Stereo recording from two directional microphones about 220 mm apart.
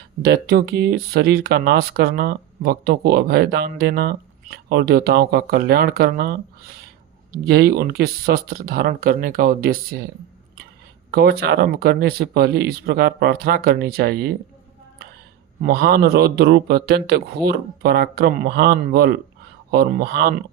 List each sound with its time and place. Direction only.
0.2 s speech: 45° right (ahead or behind)
7.4 s speech: 45° right (ahead or behind)
11.1 s speech: 45° right (ahead or behind)
15.6 s speech: 45° right (ahead or behind)